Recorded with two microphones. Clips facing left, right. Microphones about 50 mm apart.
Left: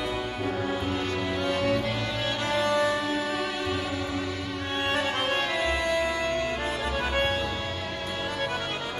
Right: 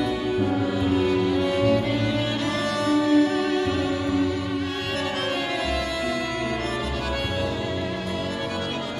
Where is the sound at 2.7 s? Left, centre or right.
Centre.